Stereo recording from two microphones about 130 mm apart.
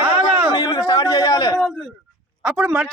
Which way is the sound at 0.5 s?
30° left (ahead or behind).